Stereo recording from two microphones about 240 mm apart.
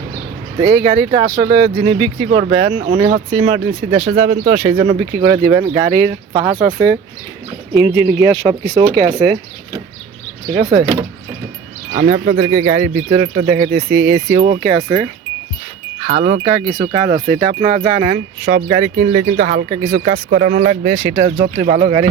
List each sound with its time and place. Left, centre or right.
0.6 s speech: right
2.5 s speech: right
2.8 s speech: right
10.5 s speech: right
11.9 s speech: right
16.0 s speech: right
16.5 s speech: centre; by 21.2 s right
21.2 s speech: right